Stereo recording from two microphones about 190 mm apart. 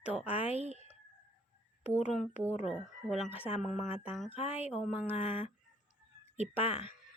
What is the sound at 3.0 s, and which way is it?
Speech, centre (ahead or behind).